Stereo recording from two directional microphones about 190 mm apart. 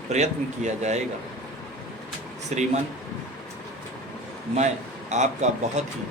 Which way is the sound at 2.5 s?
35° right (ahead or behind).